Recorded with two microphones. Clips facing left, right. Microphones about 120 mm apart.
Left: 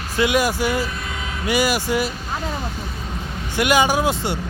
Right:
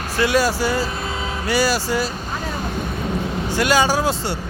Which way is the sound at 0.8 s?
30° right (ahead or behind).